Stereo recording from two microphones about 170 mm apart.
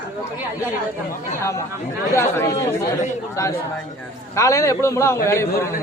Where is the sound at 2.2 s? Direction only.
15° left (ahead or behind).